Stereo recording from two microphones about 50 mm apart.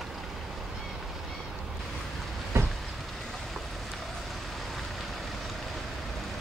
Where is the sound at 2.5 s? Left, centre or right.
Right.